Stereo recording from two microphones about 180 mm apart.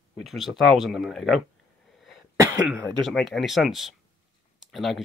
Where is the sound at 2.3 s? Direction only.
20° right (ahead or behind).